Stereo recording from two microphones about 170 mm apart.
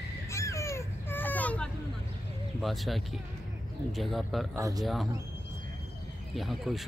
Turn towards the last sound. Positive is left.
turn(degrees=0)  # may be behind; listen again after turning